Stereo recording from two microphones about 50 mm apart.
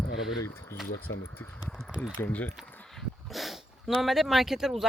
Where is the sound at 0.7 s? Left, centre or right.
Left.